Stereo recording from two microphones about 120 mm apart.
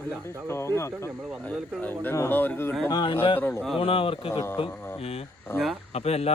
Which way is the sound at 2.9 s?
40° left (ahead or behind).